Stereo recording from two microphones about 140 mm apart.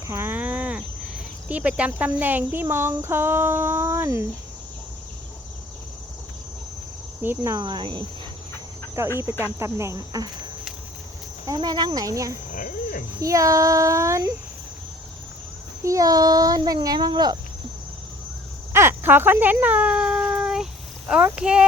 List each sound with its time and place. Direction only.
0.1 s cricket: 15° right (ahead or behind)
1.5 s speech: 10° right (ahead or behind)
7.2 s speech: 15° right (ahead or behind)
7.5 s speech: 30° right (ahead or behind)
9.0 s speech: 20° right (ahead or behind)
12.5 s speech: 80° left
13.2 s speech: 25° right (ahead or behind)
15.8 s speech: 25° right (ahead or behind)
18.7 s a sound: 15° right (ahead or behind)
21.1 s speech: 5° right (ahead or behind)